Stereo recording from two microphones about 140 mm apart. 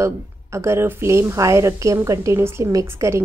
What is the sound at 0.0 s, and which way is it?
A woman's voice, 20° right (ahead or behind).